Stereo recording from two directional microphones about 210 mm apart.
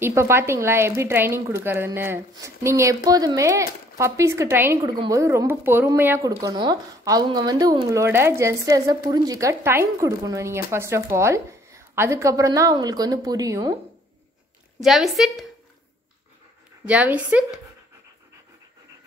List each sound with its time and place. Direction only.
0.0 s speech: 10° right (ahead or behind)
14.8 s a woman's voice: centre (ahead or behind)
16.8 s speech: 5° right (ahead or behind)